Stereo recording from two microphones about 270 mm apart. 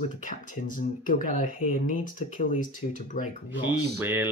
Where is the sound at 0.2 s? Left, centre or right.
Left.